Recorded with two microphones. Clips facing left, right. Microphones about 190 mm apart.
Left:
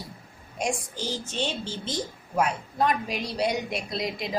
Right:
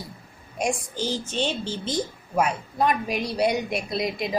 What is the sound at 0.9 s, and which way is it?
A woman's voice, 15° right (ahead or behind).